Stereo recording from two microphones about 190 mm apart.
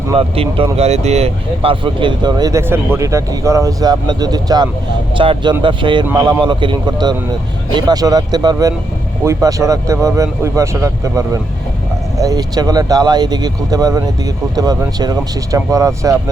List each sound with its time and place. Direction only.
0.1 s speech: 30° right (ahead or behind)